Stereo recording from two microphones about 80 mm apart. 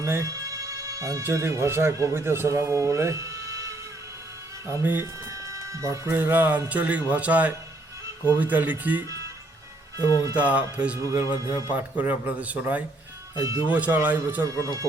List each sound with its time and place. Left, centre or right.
0.0 s speech: right
5.2 s music: right
6.1 s speech: right
10.3 s speech: centre
11.0 s speech: right
14.4 s speech: right